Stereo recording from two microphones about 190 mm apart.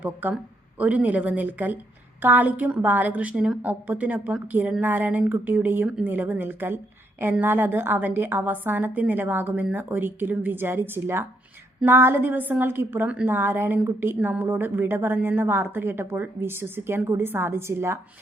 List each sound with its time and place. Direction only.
0.0 s a woman's voice: 10° right (ahead or behind)